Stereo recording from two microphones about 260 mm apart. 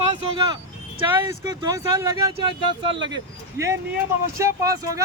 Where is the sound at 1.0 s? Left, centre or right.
Centre.